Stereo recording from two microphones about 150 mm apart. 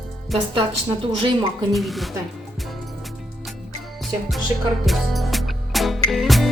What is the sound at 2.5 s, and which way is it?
Music, centre (ahead or behind).